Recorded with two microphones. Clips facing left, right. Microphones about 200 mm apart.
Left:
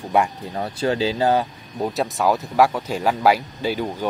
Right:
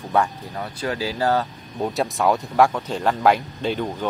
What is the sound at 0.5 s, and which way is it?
Speech, 30° left (ahead or behind).